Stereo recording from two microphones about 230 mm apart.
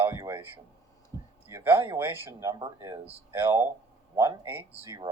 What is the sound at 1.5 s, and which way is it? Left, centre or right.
Speech, centre.